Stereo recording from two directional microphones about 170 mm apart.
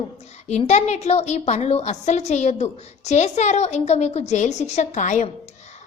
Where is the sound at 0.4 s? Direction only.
40° left (ahead or behind).